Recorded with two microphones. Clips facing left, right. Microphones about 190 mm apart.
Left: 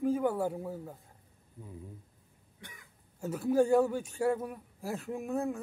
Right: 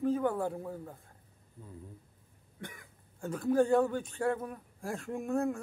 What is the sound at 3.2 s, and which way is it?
A man's voice, 10° left (ahead or behind).